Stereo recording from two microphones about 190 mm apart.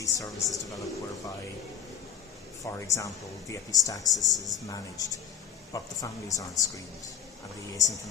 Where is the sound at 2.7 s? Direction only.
15° left (ahead or behind).